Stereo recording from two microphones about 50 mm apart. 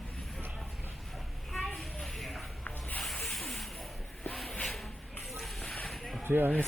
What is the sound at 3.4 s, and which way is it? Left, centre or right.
Spray, centre.